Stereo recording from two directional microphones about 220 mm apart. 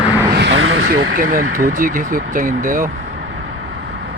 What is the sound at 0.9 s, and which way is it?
Speech, 45° right (ahead or behind).